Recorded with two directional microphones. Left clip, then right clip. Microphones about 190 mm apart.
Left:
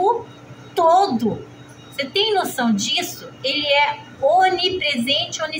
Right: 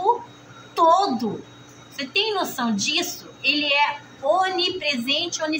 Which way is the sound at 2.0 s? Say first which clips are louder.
Left 4 dB; 15° left (ahead or behind).